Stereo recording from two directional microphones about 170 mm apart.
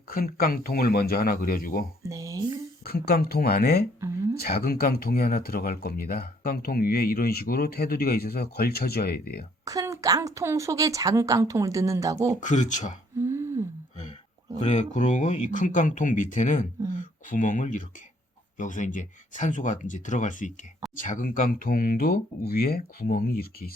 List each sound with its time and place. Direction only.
0.1 s speech: 60° left (ahead or behind)
2.0 s a sound: 20° right (ahead or behind)
2.8 s speech: 65° left (ahead or behind)
4.0 s a sound: 15° right (ahead or behind)
4.4 s speech: 65° left (ahead or behind)
9.6 s a woman's voice: 20° right (ahead or behind)
12.4 s speech: 45° left (ahead or behind)
13.1 s throat clearing: 15° right (ahead or behind)
13.9 s a sound: 45° left (ahead or behind)
14.6 s speech: 45° left (ahead or behind); by 23.7 s 60° left (ahead or behind)